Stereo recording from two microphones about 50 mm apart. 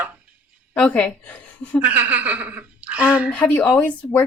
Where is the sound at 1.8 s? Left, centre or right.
Right.